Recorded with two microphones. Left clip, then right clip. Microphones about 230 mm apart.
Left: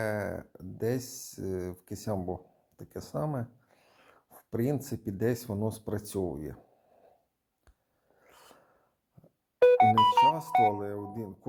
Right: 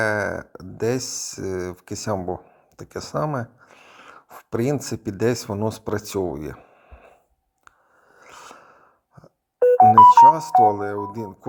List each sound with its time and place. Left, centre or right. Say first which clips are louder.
0.0 s speech: right 11 dB; centre
8.2 s snort: right 14 dB; centre
9.6 s music: right 10 dB; centre
10.1 s speech: right 12 dB; centre